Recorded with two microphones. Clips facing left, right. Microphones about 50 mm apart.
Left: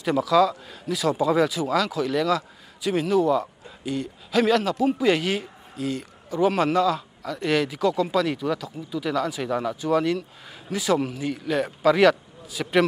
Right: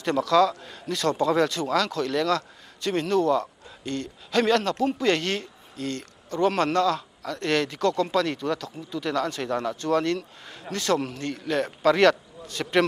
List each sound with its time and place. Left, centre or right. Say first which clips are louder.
0.0 s speech: left 1 dB; centre